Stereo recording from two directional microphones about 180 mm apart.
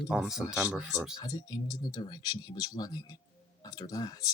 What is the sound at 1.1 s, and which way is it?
Speech, 20° left (ahead or behind).